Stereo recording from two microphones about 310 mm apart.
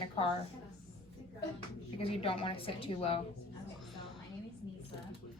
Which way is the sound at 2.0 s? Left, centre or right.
Centre.